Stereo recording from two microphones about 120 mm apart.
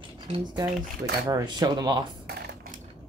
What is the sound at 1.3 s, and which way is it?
Cutlery, 35° right (ahead or behind).